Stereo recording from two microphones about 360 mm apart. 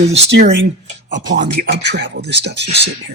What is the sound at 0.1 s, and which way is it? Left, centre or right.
Speech, right.